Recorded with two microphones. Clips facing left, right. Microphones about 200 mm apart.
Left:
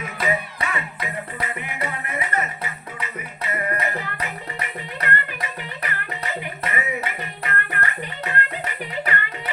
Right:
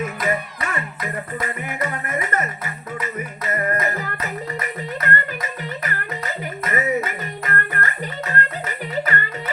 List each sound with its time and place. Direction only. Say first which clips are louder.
0.0 s music: right 2 dB; 50° right (ahead or behind)